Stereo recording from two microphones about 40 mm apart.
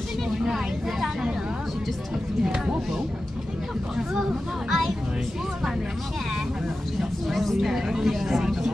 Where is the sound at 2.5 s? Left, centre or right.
Centre.